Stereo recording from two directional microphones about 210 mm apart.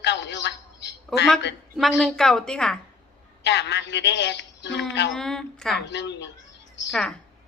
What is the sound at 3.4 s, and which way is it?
Speech, 55° left (ahead or behind).